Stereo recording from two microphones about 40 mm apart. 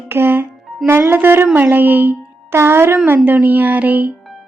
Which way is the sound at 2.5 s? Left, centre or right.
Right.